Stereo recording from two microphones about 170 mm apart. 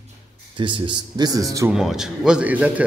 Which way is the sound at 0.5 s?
30° right (ahead or behind).